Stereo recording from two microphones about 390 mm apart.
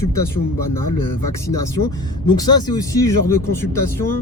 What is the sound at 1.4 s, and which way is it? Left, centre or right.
Speech, centre.